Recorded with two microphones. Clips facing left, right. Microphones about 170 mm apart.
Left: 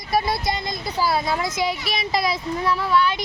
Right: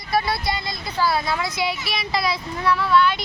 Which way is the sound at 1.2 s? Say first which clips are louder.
Left 1 dB; 45° left (ahead or behind).